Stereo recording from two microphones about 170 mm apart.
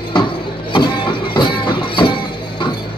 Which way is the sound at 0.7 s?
30° left (ahead or behind).